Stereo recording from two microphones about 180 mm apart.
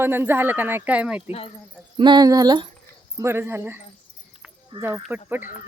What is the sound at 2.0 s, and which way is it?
A woman's voice, 25° right (ahead or behind).